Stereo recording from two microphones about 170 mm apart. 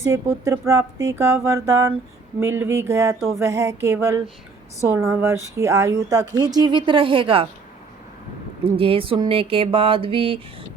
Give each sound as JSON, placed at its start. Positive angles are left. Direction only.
{"t": 0.0, "sound": "speech", "side_deg": -15}
{"t": 8.6, "sound": "speech", "side_deg": -35}